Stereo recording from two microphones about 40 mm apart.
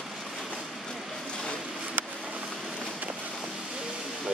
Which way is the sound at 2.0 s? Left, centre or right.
Right.